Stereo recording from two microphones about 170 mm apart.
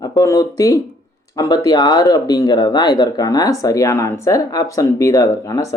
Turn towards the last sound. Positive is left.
turn(degrees=20)  # may be behind; listen again after turning